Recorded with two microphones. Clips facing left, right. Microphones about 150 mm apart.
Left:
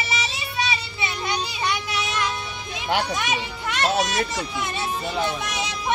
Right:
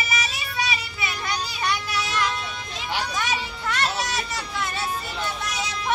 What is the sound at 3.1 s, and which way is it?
Music, 20° left (ahead or behind).